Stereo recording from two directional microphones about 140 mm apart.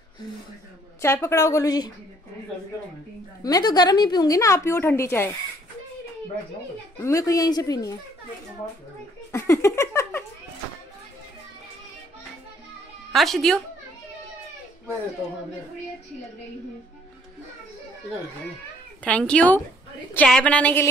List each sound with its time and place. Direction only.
1.0 s a woman's voice: 20° left (ahead or behind)
3.4 s a woman's voice: 30° left (ahead or behind)
7.0 s a woman's voice: 20° left (ahead or behind)
9.3 s a sound: 20° left (ahead or behind)
13.1 s speech: centre (ahead or behind)
19.0 s a woman's voice: 10° left (ahead or behind)